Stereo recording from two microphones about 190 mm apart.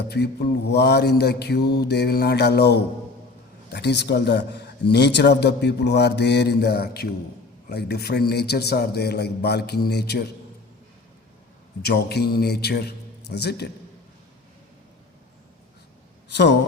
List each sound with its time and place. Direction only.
0.1 s a man's voice: 60° left (ahead or behind)
11.8 s a man's voice: 60° left (ahead or behind)
16.3 s a man's voice: 65° left (ahead or behind)